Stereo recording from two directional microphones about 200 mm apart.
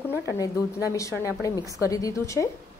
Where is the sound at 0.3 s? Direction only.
15° left (ahead or behind).